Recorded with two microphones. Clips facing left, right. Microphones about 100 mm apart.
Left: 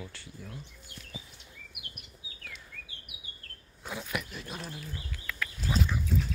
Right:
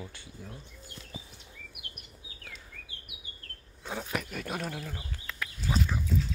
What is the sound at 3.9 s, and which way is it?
Dog, 40° right (ahead or behind).